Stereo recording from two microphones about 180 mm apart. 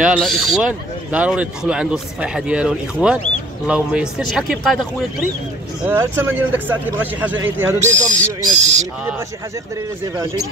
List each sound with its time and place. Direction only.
0.0 s speech: centre (ahead or behind)
5.9 s speech: 10° right (ahead or behind)
8.5 s speech: 40° right (ahead or behind)